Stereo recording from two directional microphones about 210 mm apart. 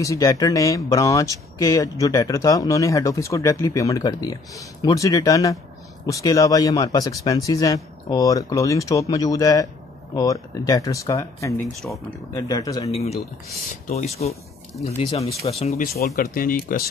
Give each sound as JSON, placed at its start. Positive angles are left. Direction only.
{"t": 0.0, "sound": "speech", "side_deg": 15}
{"t": 12.9, "sound": "speech", "side_deg": 30}
{"t": 16.2, "sound": "speech", "side_deg": 45}